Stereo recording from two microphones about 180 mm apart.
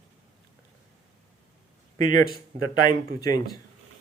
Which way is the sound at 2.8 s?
20° left (ahead or behind).